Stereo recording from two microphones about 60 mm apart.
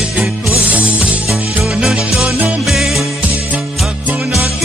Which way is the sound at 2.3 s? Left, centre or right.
Right.